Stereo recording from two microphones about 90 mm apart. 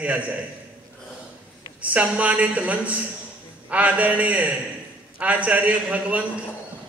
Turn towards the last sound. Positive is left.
turn(degrees=-15)  # may be behind; listen again after turning